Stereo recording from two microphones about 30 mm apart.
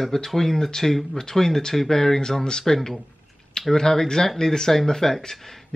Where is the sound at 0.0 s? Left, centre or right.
Centre.